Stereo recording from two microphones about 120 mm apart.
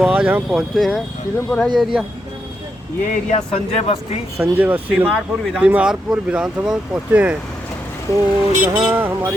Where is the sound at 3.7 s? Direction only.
55° left (ahead or behind).